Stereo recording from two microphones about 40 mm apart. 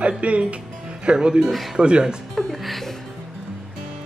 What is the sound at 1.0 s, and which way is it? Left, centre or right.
Speech, right.